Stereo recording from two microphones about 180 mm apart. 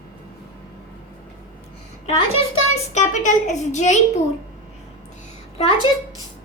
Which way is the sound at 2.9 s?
40° left (ahead or behind).